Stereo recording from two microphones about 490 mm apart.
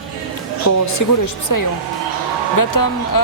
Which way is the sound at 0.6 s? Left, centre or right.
Left.